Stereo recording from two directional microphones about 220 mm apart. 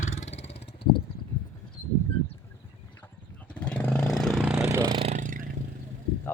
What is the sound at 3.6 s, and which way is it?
Vehicle, 5° left (ahead or behind).